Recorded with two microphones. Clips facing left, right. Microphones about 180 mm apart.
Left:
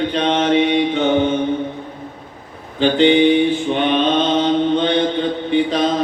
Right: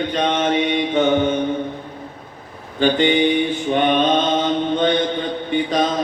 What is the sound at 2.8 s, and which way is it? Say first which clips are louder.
Mantra: left 3 dB; 50° right (ahead or behind).